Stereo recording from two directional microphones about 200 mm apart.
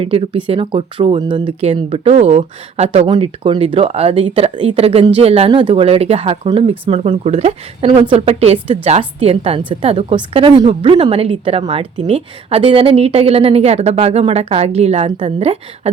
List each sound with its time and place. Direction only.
0.0 s a woman's voice: 25° right (ahead or behind)